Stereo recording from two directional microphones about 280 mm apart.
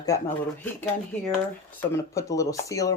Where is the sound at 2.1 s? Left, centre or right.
Centre.